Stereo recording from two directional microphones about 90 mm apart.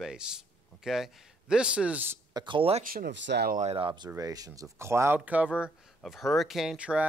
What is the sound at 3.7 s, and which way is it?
Speech, 65° right (ahead or behind).